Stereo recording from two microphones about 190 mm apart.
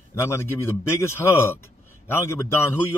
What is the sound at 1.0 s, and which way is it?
Speech, 15° left (ahead or behind).